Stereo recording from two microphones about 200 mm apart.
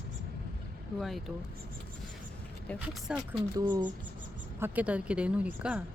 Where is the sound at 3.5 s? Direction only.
20° right (ahead or behind).